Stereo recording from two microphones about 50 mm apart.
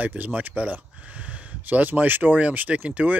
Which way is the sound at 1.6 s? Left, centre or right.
Right.